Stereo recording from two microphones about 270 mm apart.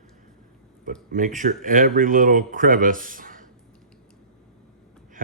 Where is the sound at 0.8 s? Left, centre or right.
Right.